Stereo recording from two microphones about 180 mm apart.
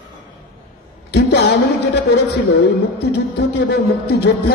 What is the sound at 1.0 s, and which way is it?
A man's voice, 70° left (ahead or behind).